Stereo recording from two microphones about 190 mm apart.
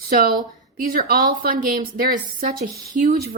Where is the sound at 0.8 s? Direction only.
50° right (ahead or behind).